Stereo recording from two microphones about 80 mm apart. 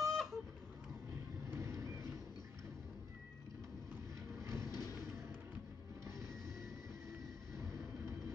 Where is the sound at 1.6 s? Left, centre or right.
Right.